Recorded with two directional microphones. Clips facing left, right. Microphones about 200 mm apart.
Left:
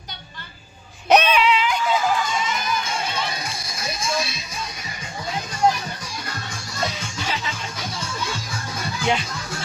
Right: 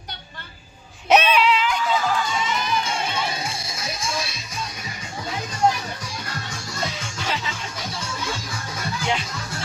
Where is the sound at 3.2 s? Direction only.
25° right (ahead or behind).